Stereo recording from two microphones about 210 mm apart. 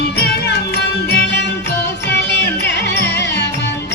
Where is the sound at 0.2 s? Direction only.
50° left (ahead or behind).